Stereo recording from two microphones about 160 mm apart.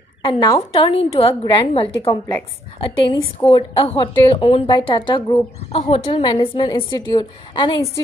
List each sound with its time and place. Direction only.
0.2 s a woman's voice: 30° left (ahead or behind)
2.0 s a woman's voice: 15° left (ahead or behind)
3.1 s a woman's voice: 30° left (ahead or behind)